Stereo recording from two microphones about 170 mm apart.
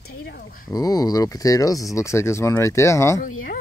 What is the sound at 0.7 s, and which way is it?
Speech, 20° left (ahead or behind).